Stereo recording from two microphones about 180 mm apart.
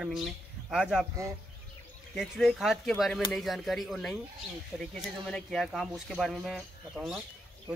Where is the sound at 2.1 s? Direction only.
Centre (ahead or behind).